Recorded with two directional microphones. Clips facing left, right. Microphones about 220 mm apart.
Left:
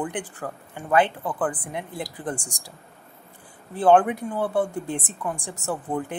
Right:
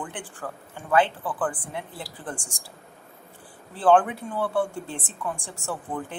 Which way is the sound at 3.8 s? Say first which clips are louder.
Left 2 dB; 20° left (ahead or behind).